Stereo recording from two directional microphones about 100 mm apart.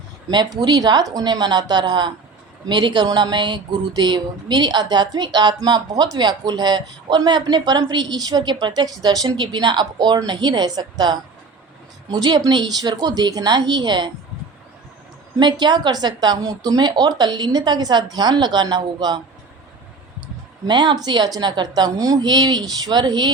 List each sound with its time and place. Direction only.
0.3 s speech: 45° right (ahead or behind)
15.4 s speech: 50° right (ahead or behind)
20.2 s speech: 50° right (ahead or behind)